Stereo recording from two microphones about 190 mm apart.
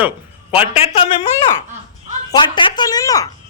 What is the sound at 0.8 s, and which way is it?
Speech, 30° left (ahead or behind).